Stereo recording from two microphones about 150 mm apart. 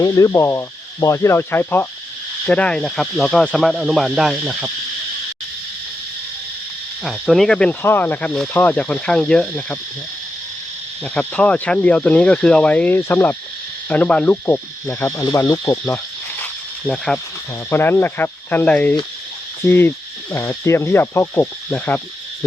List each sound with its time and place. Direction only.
0.0 s speech: 25° left (ahead or behind); by 4.7 s 5° right (ahead or behind)
7.0 s speech: centre (ahead or behind)
11.0 s speech: 5° left (ahead or behind)
16.4 s snake: 5° left (ahead or behind)
17.7 s speech: 15° left (ahead or behind)